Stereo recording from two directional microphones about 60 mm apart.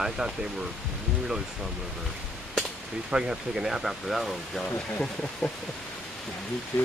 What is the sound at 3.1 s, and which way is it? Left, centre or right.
Speech, centre.